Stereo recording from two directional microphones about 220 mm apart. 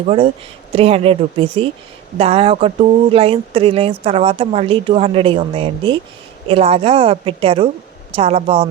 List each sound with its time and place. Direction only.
0.0 s speech: 25° right (ahead or behind)